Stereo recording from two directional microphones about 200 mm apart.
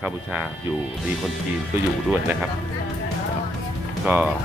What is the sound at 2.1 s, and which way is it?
Speech, 5° right (ahead or behind).